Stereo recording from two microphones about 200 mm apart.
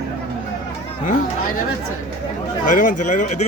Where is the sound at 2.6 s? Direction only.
40° left (ahead or behind).